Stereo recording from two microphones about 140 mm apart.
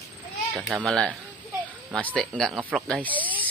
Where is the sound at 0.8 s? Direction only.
5° left (ahead or behind).